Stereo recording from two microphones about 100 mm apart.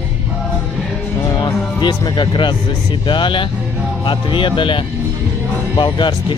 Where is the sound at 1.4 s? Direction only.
50° left (ahead or behind).